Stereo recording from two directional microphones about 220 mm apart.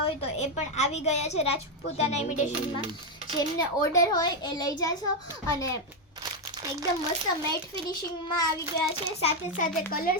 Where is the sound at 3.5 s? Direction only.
15° left (ahead or behind).